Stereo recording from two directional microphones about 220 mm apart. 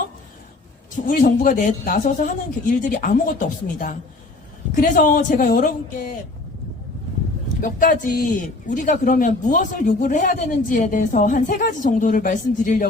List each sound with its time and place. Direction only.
1.0 s speech: 35° left (ahead or behind)
4.8 s speech: 40° left (ahead or behind)
7.6 s speech: 40° left (ahead or behind)